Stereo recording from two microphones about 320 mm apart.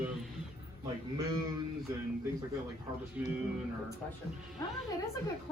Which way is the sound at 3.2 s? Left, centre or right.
Centre.